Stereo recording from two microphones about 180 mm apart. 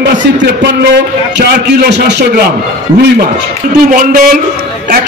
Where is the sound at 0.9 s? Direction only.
65° right (ahead or behind).